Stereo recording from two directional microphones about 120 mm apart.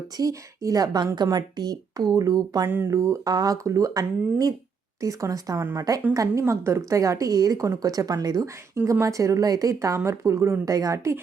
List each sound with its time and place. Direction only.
0.2 s a woman's voice: 30° right (ahead or behind)
2.6 s a woman's voice: 15° right (ahead or behind)